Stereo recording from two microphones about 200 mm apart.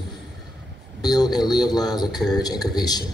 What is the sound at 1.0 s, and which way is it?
A man's voice, 20° left (ahead or behind).